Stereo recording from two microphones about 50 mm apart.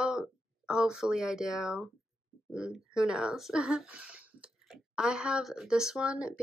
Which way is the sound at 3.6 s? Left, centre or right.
Right.